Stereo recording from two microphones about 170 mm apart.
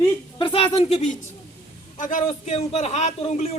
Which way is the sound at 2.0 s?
50° left (ahead or behind).